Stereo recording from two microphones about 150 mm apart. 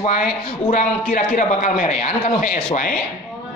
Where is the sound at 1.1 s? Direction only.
60° left (ahead or behind).